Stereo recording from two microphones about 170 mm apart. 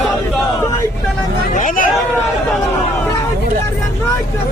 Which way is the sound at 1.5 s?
55° left (ahead or behind).